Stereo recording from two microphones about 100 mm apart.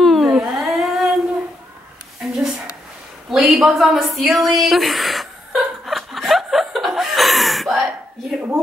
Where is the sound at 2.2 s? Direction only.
5° right (ahead or behind).